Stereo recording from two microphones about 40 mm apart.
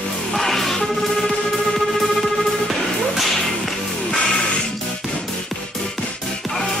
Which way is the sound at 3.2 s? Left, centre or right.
Centre.